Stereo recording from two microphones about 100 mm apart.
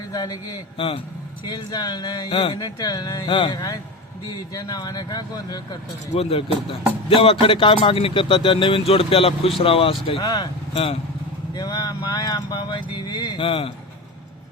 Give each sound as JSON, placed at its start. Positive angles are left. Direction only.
{"t": 0.1, "sound": "speech", "side_deg": 40}
{"t": 0.8, "sound": "a man's voice", "side_deg": 65}
{"t": 1.5, "sound": "speech", "side_deg": 45}
{"t": 4.5, "sound": "speech", "side_deg": 40}
{"t": 6.1, "sound": "a man's voice", "side_deg": 75}
{"t": 10.2, "sound": "speech", "side_deg": 40}
{"t": 10.8, "sound": "speech", "side_deg": 70}
{"t": 11.5, "sound": "speech", "side_deg": 40}
{"t": 13.4, "sound": "a man's voice", "side_deg": 65}